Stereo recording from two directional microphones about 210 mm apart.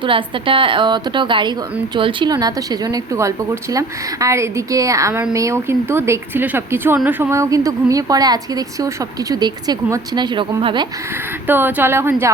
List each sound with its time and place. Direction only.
0.0 s a woman's voice: 25° right (ahead or behind)
11.4 s speech: 10° right (ahead or behind)